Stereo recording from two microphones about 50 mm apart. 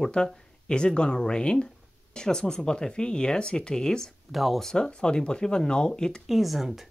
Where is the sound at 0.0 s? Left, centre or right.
Centre.